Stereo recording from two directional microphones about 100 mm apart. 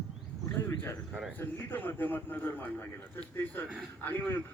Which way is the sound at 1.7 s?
20° left (ahead or behind).